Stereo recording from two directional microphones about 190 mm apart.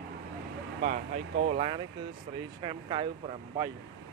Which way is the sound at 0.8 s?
45° right (ahead or behind).